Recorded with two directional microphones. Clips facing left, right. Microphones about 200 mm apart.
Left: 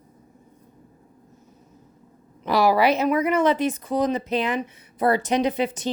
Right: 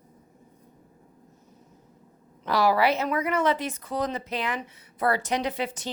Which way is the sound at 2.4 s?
15° left (ahead or behind).